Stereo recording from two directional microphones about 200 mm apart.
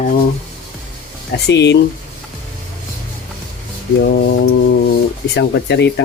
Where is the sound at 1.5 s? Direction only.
60° left (ahead or behind).